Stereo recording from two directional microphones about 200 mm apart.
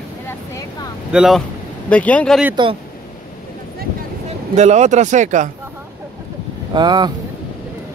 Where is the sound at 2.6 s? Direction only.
25° right (ahead or behind).